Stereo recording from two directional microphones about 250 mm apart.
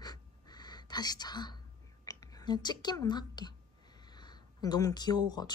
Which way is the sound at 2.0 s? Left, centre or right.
Centre.